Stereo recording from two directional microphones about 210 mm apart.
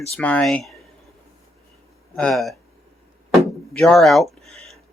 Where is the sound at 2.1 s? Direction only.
Centre (ahead or behind).